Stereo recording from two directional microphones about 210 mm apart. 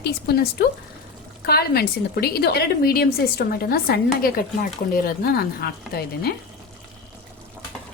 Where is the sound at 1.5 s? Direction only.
50° left (ahead or behind).